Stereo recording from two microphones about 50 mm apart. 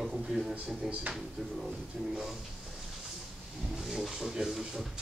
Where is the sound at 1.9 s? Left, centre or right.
Centre.